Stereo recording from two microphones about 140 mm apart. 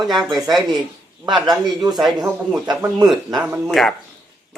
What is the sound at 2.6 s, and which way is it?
Speech, 30° right (ahead or behind).